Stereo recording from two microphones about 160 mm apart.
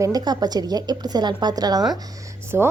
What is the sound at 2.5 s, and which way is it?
Speech, 15° right (ahead or behind).